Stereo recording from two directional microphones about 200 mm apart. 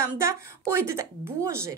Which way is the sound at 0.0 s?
15° right (ahead or behind).